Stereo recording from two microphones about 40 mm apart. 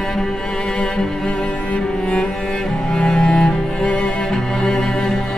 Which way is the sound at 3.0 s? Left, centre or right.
Centre.